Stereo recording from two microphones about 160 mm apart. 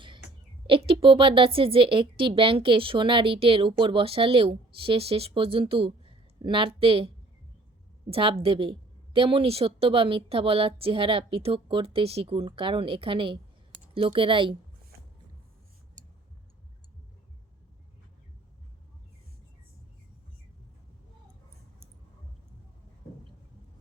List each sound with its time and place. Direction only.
0.7 s a woman's voice: 35° right (ahead or behind)
8.1 s a woman's voice: 35° right (ahead or behind)
16.0 s a sound: 50° right (ahead or behind)